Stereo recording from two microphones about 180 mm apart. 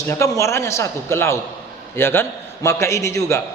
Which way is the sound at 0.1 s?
15° left (ahead or behind).